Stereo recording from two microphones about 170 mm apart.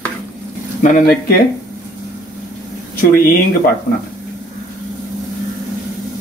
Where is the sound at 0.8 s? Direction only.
50° left (ahead or behind).